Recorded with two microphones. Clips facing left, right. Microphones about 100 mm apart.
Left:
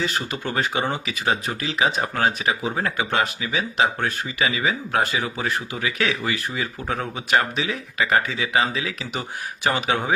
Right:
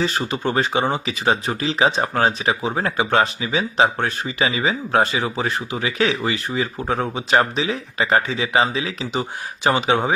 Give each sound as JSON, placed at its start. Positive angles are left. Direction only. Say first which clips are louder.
{"t": 0.0, "sound": "speech", "louder": "right 4 dB", "side_deg": -35}